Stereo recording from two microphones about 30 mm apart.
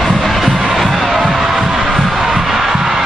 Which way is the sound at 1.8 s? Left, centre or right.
Centre.